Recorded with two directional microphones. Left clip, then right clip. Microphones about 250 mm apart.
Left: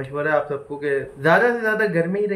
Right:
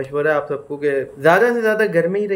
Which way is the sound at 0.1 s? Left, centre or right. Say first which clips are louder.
Right 2 dB; centre.